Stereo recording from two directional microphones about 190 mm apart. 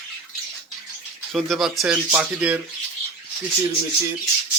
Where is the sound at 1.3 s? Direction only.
Centre (ahead or behind).